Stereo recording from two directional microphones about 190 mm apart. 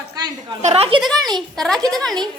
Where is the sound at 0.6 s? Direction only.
35° right (ahead or behind).